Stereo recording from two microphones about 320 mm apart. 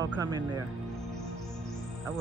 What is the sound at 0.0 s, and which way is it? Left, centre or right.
Speech, centre.